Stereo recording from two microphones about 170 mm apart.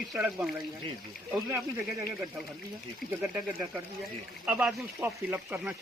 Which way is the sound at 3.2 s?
10° right (ahead or behind).